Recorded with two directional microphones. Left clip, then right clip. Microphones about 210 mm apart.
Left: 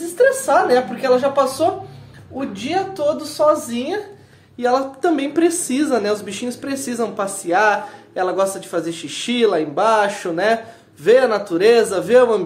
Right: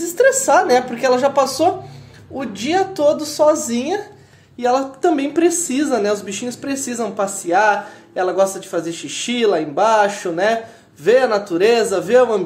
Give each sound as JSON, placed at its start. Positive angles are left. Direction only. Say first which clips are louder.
{"t": 0.0, "sound": "a woman's voice", "louder": "right 1 dB", "side_deg": -45}
{"t": 4.6, "sound": "a woman's voice", "louder": "right 1 dB", "side_deg": -10}